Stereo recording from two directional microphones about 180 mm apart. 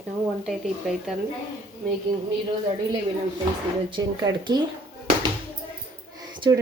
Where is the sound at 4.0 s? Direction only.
25° right (ahead or behind).